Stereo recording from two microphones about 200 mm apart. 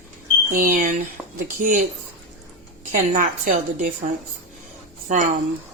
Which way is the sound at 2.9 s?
40° right (ahead or behind).